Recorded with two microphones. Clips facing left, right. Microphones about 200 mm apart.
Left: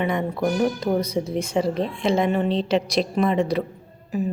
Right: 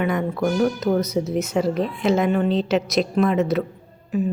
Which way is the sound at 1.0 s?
30° left (ahead or behind).